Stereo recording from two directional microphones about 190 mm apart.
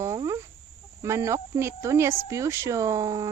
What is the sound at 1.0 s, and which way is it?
Speech, 15° right (ahead or behind).